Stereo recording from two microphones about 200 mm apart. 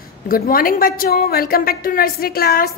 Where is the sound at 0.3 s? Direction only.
45° left (ahead or behind).